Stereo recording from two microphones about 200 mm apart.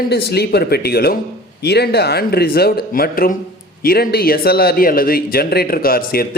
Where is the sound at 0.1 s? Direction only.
55° left (ahead or behind).